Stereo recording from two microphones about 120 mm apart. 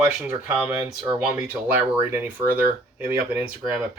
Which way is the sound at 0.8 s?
30° right (ahead or behind).